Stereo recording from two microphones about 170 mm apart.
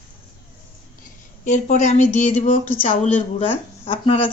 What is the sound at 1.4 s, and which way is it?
Speech, 45° left (ahead or behind).